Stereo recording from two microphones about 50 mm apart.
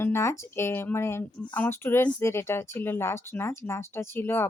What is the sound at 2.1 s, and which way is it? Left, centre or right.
A woman's voice, left.